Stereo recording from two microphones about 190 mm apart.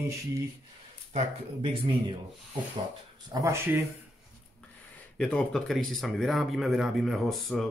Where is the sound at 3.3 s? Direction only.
15° right (ahead or behind).